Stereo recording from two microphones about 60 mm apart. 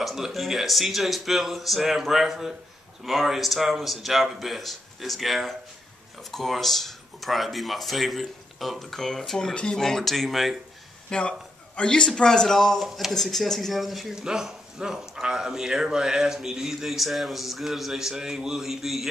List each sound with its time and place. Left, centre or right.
0.0 s speech: centre
11.1 s a man's voice: centre
12.8 s speech: centre